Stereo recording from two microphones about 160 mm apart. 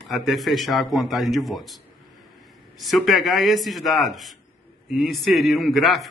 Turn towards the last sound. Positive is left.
turn(degrees=0)  # may be behind; listen again after turning